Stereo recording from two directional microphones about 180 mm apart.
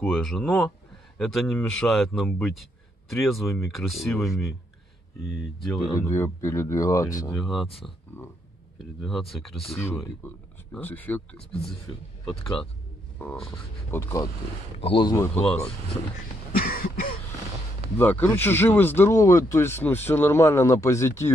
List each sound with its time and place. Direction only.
0.0 s speech: centre (ahead or behind)
5.7 s speech: centre (ahead or behind)
5.9 s speech: 15° left (ahead or behind)
7.3 s speech: centre (ahead or behind)
9.0 s speech: centre (ahead or behind); by 14.3 s 15° left (ahead or behind)
14.8 s speech: 30° left (ahead or behind)
15.1 s speech: 5° left (ahead or behind)
16.5 s throat clearing: 55° left (ahead or behind)
17.9 s speech: 10° left (ahead or behind)